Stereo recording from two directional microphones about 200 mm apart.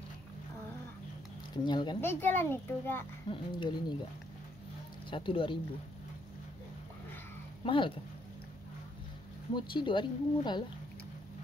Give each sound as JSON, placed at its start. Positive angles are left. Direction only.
{"t": 1.6, "sound": "speech", "side_deg": 20}
{"t": 2.0, "sound": "a child's voice", "side_deg": 10}
{"t": 3.3, "sound": "speech", "side_deg": 25}
{"t": 5.1, "sound": "speech", "side_deg": 25}
{"t": 7.6, "sound": "speech", "side_deg": 25}
{"t": 9.6, "sound": "speech", "side_deg": 25}